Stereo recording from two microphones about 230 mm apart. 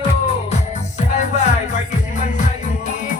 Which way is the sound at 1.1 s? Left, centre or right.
Left.